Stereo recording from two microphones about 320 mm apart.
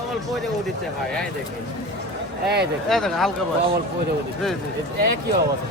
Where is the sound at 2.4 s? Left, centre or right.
Right.